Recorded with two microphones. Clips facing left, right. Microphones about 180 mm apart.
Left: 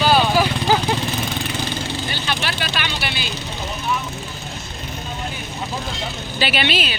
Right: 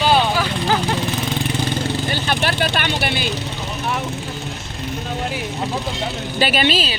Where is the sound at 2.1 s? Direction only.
50° right (ahead or behind).